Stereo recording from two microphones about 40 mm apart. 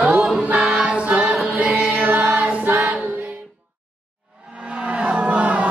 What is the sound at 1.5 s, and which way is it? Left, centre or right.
Music, right.